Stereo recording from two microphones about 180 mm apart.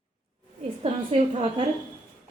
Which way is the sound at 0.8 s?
40° right (ahead or behind).